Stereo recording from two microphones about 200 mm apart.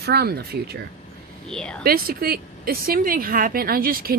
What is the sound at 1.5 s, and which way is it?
Speech, 5° left (ahead or behind).